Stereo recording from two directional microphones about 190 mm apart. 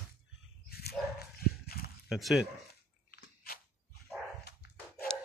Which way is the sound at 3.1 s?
50° left (ahead or behind).